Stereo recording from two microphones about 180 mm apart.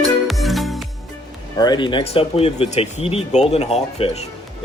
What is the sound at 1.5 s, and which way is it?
Speech, 25° left (ahead or behind).